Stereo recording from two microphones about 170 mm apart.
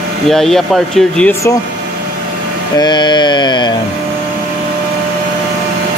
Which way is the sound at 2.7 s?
25° left (ahead or behind).